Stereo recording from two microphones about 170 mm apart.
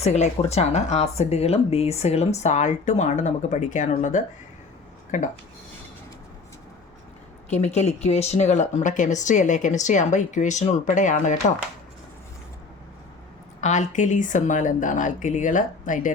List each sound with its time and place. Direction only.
0.0 s speech: 40° left (ahead or behind)
7.5 s speech: 40° left (ahead or behind)
13.6 s speech: 45° left (ahead or behind)